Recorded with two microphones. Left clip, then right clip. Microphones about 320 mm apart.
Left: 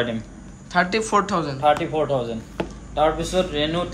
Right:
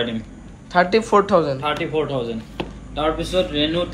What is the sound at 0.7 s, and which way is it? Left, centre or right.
Speech, centre.